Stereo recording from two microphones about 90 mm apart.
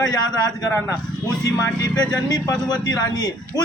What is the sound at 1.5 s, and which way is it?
A man's voice, 40° left (ahead or behind).